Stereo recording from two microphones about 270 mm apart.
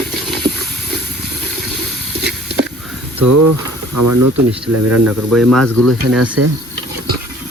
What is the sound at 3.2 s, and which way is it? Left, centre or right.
Speech, right.